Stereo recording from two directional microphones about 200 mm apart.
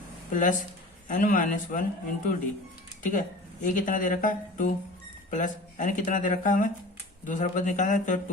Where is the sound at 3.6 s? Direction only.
40° left (ahead or behind).